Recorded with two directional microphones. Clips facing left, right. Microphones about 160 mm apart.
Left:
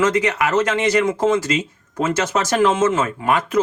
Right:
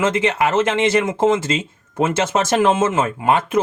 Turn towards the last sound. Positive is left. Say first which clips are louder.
# right 2 dB
turn(degrees=-25)  # may be behind; listen again after turning